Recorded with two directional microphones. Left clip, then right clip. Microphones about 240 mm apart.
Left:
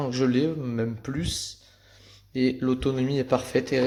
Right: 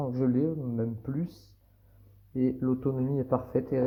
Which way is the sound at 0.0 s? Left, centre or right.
Left.